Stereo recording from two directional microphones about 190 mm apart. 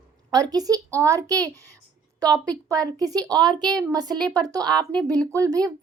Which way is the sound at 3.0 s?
20° right (ahead or behind).